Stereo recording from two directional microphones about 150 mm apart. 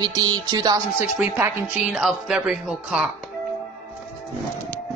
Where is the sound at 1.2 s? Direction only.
15° right (ahead or behind).